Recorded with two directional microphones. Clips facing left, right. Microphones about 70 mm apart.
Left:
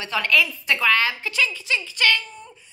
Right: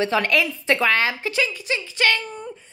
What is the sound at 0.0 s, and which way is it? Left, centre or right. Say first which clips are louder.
A woman's voice: right 2 dB; right.